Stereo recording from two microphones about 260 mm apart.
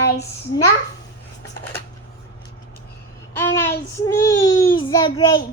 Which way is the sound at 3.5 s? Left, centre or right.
Centre.